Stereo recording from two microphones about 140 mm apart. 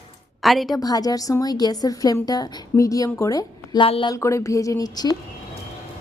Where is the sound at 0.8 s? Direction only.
25° left (ahead or behind).